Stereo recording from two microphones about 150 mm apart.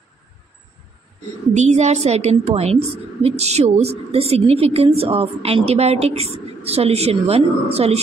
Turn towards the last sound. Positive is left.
turn(degrees=-40)  # may be behind; listen again after turning